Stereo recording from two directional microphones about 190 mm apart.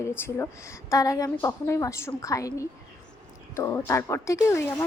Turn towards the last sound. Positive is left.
turn(degrees=15)  # may be behind; listen again after turning